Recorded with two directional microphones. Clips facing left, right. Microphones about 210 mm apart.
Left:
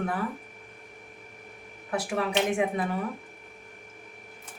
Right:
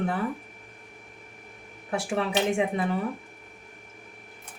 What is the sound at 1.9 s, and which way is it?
Speech, 25° right (ahead or behind).